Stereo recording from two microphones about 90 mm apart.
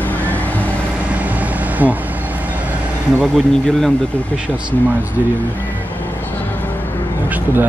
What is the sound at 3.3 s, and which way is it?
Speech, 5° left (ahead or behind).